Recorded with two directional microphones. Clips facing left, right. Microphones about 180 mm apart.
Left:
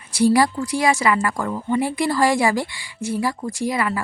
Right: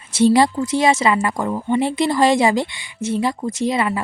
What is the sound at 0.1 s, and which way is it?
A woman's voice, 25° right (ahead or behind).